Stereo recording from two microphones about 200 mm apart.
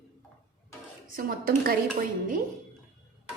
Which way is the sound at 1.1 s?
45° right (ahead or behind).